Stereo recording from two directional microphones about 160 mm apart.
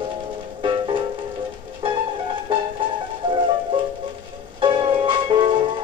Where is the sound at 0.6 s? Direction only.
30° right (ahead or behind).